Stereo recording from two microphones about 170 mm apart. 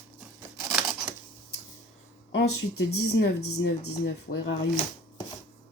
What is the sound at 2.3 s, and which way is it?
Speech, 80° left.